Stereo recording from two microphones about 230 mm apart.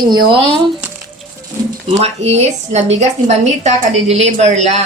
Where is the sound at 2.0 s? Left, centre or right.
Right.